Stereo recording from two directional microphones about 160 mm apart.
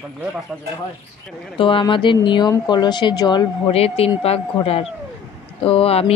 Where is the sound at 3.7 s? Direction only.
40° left (ahead or behind).